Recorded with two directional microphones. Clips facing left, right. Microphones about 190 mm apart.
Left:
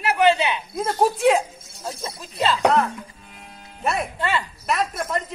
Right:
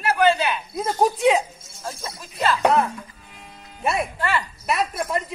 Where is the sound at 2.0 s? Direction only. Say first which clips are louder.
Left 1 dB; 25° left (ahead or behind).